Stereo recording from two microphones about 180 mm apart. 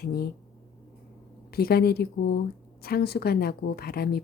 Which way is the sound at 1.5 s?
60° left (ahead or behind).